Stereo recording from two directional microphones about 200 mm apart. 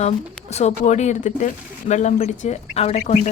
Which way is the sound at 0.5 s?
35° left (ahead or behind).